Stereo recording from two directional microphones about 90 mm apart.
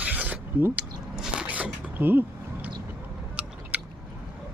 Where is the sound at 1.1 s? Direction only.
5° right (ahead or behind).